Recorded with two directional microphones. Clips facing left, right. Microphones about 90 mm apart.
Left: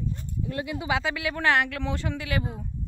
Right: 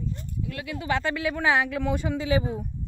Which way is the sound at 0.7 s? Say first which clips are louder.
Right 1 dB; 10° left (ahead or behind).